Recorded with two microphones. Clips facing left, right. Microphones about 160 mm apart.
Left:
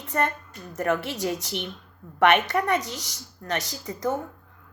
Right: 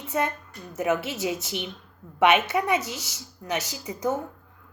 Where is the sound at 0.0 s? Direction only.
10° right (ahead or behind).